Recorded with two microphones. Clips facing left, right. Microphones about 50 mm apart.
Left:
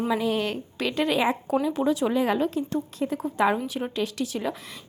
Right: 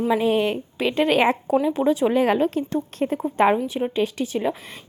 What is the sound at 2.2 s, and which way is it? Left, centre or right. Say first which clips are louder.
A woman's voice: right 4 dB; right.